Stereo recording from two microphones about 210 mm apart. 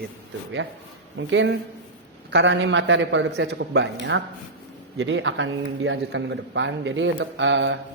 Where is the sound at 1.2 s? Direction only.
60° right (ahead or behind).